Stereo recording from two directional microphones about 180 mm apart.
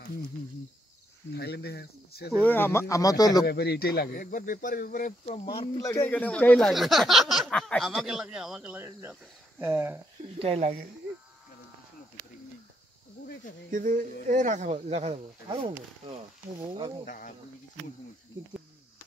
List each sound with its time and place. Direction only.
1.3 s speech: 65° left (ahead or behind)
2.4 s speech: 10° left (ahead or behind)
3.4 s speech: 65° left (ahead or behind); by 5.7 s 35° left (ahead or behind)
5.8 s speech: 15° left (ahead or behind); by 9.9 s 10° right (ahead or behind)
10.4 s speech: 30° right (ahead or behind)
13.7 s speech: 50° right (ahead or behind)
17.0 s speech: 50° left (ahead or behind)